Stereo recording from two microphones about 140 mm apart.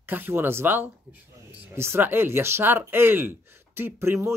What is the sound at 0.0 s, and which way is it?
Speech, 15° right (ahead or behind).